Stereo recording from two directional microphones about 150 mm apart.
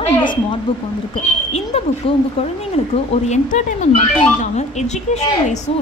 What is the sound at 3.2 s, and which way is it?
A woman's voice, 50° left (ahead or behind).